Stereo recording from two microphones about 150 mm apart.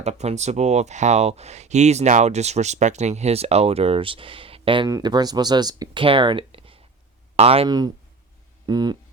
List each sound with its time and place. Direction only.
0.0 s speech: 45° right (ahead or behind)
4.9 s speech: 25° right (ahead or behind); by 7.7 s 40° right (ahead or behind)
8.6 s speech: 25° right (ahead or behind)